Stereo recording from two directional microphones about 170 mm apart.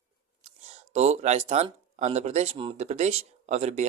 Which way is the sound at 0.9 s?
40° right (ahead or behind).